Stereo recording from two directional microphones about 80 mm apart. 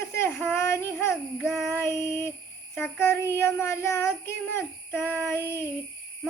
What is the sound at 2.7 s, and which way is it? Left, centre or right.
Child singing, left.